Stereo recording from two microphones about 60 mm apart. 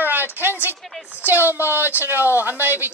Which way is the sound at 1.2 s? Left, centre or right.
Right.